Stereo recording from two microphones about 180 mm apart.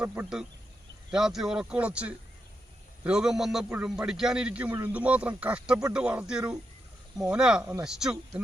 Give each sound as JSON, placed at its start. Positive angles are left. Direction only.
{"t": 0.0, "sound": "a man's voice", "side_deg": -10}
{"t": 7.6, "sound": "speech", "side_deg": -15}
{"t": 7.9, "sound": "a man's voice", "side_deg": -5}